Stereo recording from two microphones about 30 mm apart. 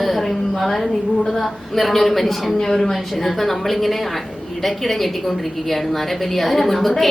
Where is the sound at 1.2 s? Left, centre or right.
Centre.